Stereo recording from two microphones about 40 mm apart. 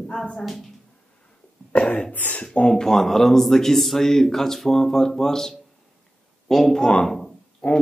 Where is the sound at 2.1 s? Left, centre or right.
Left.